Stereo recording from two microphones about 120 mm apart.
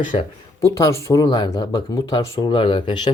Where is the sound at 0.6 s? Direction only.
25° left (ahead or behind).